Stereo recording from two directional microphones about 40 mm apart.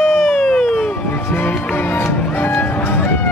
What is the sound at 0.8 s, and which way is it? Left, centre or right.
Music, left.